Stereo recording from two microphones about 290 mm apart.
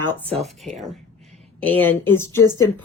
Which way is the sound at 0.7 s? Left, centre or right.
Centre.